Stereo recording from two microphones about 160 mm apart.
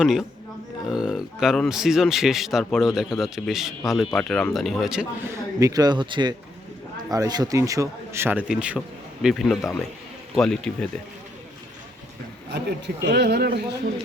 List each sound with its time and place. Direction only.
0.0 s speech: centre (ahead or behind)
5.3 s speech: 20° right (ahead or behind); by 11.0 s 5° left (ahead or behind)
12.5 s speech: 90° right